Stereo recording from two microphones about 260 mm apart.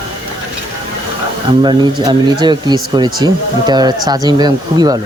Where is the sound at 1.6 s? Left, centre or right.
Centre.